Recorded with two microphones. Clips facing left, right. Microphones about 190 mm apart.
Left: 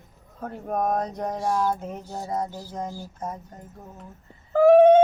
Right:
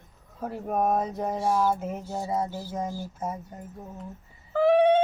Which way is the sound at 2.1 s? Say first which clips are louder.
Even; 5° right (ahead or behind).